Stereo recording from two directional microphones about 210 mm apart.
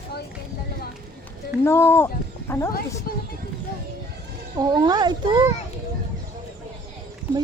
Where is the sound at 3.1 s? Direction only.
45° left (ahead or behind).